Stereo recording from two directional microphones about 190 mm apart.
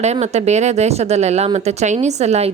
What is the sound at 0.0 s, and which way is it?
A woman's voice, 35° right (ahead or behind).